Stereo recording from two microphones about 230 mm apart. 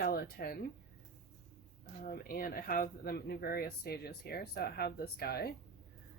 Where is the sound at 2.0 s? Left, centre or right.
Left.